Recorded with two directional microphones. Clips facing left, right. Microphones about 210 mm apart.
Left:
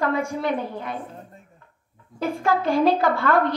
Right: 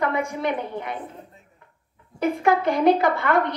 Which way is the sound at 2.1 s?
20° right (ahead or behind).